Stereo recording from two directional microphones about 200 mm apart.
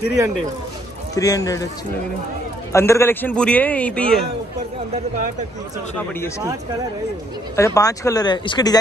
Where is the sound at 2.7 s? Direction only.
15° left (ahead or behind).